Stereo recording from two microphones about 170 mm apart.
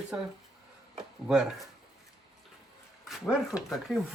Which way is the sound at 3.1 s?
Centre (ahead or behind).